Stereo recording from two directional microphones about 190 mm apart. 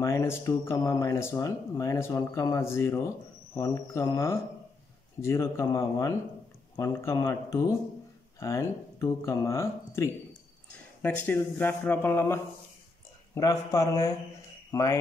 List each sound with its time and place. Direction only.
0.0 s speech: 15° left (ahead or behind)